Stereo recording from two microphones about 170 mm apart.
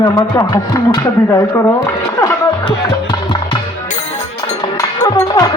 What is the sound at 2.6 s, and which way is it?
Music, 30° left (ahead or behind).